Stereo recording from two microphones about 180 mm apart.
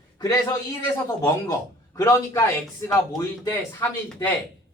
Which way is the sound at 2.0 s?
15° left (ahead or behind).